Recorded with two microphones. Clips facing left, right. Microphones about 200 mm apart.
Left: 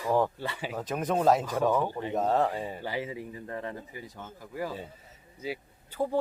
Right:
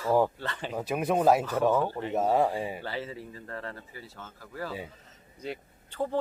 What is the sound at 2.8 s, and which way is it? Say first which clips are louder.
Speech: left 2 dB; 15° left (ahead or behind).